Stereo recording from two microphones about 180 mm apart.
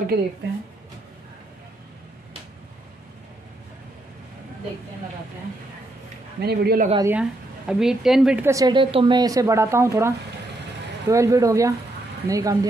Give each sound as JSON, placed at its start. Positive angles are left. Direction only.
{"t": 0.1, "sound": "a man's voice", "side_deg": -60}
{"t": 6.4, "sound": "a man's voice", "side_deg": -60}
{"t": 7.0, "sound": "a woman's voice", "side_deg": -10}
{"t": 8.5, "sound": "speech", "side_deg": -20}